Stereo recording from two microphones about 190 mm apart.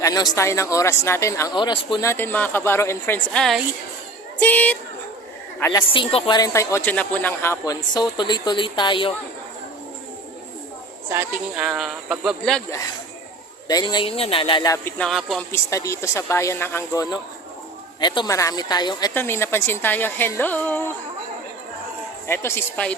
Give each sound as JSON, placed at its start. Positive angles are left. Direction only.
{"t": 0.0, "sound": "a man's voice", "side_deg": 20}
{"t": 2.0, "sound": "a woman's voice", "side_deg": 10}
{"t": 5.9, "sound": "speech", "side_deg": 30}
{"t": 11.1, "sound": "speech", "side_deg": -5}
{"t": 13.7, "sound": "speech", "side_deg": 20}
{"t": 14.9, "sound": "speech", "side_deg": 0}
{"t": 15.5, "sound": "speech", "side_deg": 15}
{"t": 22.3, "sound": "speech", "side_deg": 15}